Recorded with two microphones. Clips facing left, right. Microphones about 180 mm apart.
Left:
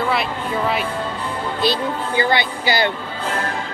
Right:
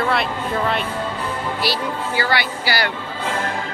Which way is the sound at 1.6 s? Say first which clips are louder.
Left 5 dB; 20° left (ahead or behind).